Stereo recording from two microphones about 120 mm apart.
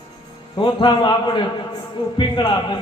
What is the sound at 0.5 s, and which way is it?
A man's voice, 40° left (ahead or behind).